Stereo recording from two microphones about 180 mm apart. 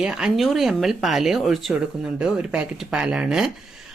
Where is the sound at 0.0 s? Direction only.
5° right (ahead or behind).